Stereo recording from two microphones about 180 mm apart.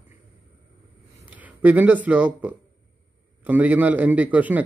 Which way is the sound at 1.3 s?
10° right (ahead or behind).